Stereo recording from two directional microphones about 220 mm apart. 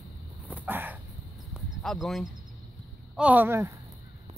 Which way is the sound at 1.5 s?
Centre (ahead or behind).